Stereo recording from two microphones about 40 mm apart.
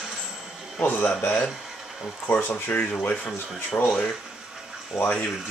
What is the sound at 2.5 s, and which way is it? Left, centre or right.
Speech, left.